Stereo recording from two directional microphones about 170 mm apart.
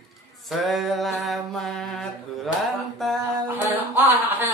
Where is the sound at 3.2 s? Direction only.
10° right (ahead or behind).